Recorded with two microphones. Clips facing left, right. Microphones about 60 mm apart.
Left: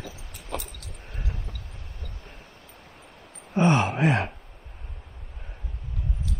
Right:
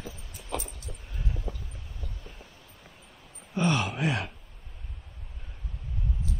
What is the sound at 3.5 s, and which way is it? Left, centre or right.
Gasp, left.